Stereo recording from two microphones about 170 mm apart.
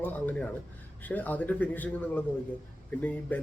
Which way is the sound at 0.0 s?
10° left (ahead or behind).